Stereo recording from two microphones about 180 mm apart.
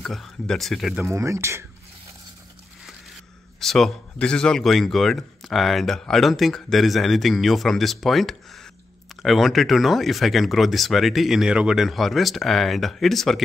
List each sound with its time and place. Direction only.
0.0 s speech: centre (ahead or behind)
1.0 s speech: 15° right (ahead or behind)
3.5 s speech: centre (ahead or behind)